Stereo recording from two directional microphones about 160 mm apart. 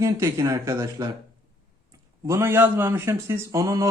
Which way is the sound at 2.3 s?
15° right (ahead or behind).